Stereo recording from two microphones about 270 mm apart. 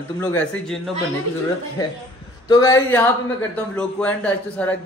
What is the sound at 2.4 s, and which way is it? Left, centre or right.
A man's voice, centre.